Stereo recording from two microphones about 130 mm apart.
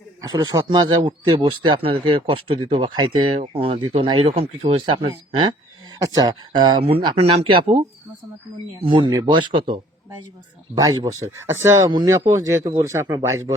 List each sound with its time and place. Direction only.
0.2 s speech: 30° right (ahead or behind)
3.3 s speech: 45° right (ahead or behind)
6.0 s speech: 30° right (ahead or behind); by 7.6 s 45° right (ahead or behind)
8.8 s speech: 40° right (ahead or behind)
10.8 s speech: 30° right (ahead or behind)
11.9 s speech: 35° right (ahead or behind)
12.3 s speech: 25° right (ahead or behind)